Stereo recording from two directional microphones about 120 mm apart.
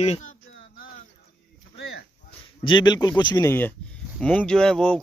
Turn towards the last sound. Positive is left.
turn(degrees=5)  # may be behind; listen again after turning